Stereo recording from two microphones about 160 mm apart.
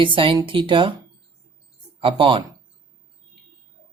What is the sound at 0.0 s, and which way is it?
Speech, 30° right (ahead or behind).